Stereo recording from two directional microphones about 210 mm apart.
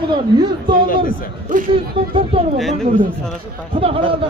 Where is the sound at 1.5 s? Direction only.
40° right (ahead or behind).